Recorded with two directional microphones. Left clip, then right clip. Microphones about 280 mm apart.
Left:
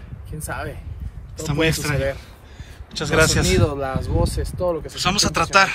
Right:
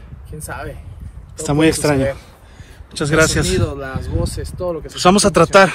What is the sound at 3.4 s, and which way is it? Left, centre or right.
Speech, left.